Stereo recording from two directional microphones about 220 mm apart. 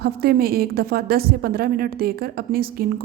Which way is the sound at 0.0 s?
45° right (ahead or behind).